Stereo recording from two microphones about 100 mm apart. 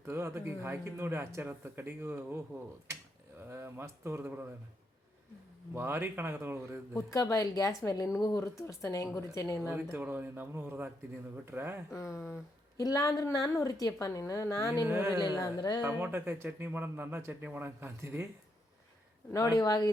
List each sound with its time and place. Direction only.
0.0 s speech: 25° right (ahead or behind)
3.4 s speech: 25° right (ahead or behind)
5.7 s speech: 20° right (ahead or behind)
6.9 s speech: 35° left (ahead or behind)
9.6 s speech: 20° right (ahead or behind)
12.8 s speech: 35° left (ahead or behind)
14.8 s speech: 20° right (ahead or behind)
15.4 s speech: 40° left (ahead or behind)
15.8 s speech: 20° right (ahead or behind)
19.3 s speech: 35° left (ahead or behind)